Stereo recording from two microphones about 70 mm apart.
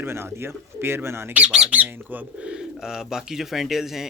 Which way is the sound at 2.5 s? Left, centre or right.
Centre.